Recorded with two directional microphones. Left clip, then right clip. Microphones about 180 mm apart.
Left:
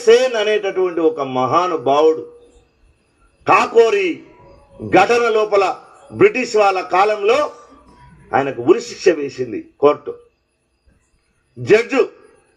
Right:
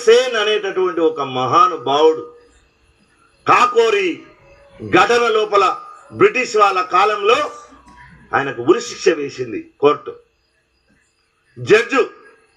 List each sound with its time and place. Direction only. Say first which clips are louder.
0.0 s a man's voice: even; 45° left (ahead or behind)
3.4 s a man's voice: even; 45° left (ahead or behind)
11.6 s a man's voice: even; 45° left (ahead or behind)